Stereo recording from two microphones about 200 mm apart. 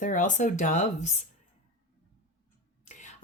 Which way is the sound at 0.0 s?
40° left (ahead or behind).